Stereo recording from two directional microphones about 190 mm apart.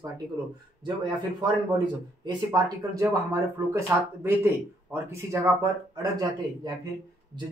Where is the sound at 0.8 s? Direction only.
25° right (ahead or behind).